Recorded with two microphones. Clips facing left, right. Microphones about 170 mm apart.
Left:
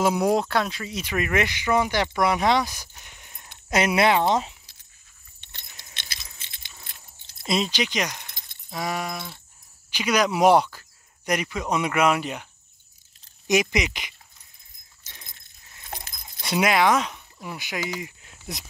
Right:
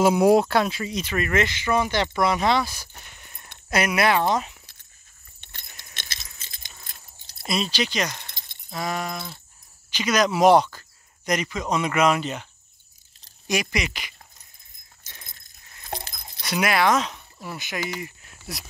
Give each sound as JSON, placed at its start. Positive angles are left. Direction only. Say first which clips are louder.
{"t": 0.0, "sound": "speech", "louder": "right 4 dB", "side_deg": -5}
{"t": 1.0, "sound": "speech", "louder": "even", "side_deg": 15}
{"t": 3.1, "sound": "a sound", "louder": "right 1 dB", "side_deg": 15}
{"t": 3.7, "sound": "speech", "louder": "left 1 dB", "side_deg": 25}
{"t": 5.4, "sound": "keys jangling", "louder": "right 1 dB", "side_deg": -50}
{"t": 7.4, "sound": "speech", "louder": "left 1 dB", "side_deg": 20}
{"t": 8.6, "sound": "keys jangling", "louder": "even", "side_deg": 15}
{"t": 9.8, "sound": "speech", "louder": "right 1 dB", "side_deg": 10}
{"t": 13.5, "sound": "speech", "louder": "left 4 dB", "side_deg": 20}
{"t": 15.3, "sound": "glass", "louder": "right 1 dB", "side_deg": -35}
{"t": 16.4, "sound": "speech", "louder": "left 1 dB", "side_deg": 20}